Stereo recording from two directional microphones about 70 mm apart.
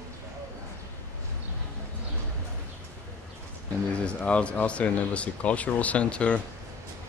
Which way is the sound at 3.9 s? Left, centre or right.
Centre.